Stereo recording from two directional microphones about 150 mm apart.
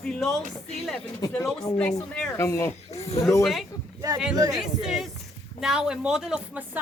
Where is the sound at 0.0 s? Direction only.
5° left (ahead or behind).